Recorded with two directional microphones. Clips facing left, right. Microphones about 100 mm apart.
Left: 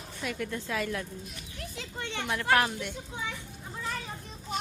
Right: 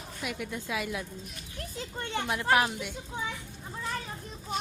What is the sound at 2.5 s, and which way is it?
Speech, 10° right (ahead or behind).